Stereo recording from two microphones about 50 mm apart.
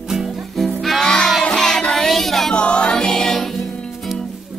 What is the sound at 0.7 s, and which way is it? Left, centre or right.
Music, centre.